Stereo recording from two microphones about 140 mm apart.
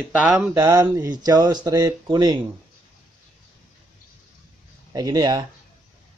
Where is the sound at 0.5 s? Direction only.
25° right (ahead or behind).